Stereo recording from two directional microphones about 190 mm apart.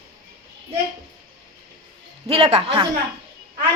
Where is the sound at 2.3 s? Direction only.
30° right (ahead or behind).